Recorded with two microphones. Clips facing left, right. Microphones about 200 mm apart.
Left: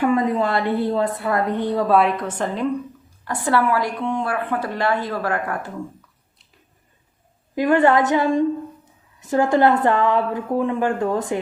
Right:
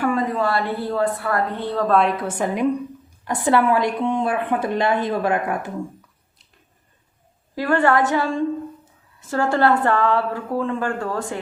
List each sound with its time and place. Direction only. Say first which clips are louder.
0.0 s a woman's voice: left 2 dB; 20° left (ahead or behind); by 5.7 s 20° right (ahead or behind)
7.5 s a woman's voice: left 2 dB; 20° left (ahead or behind)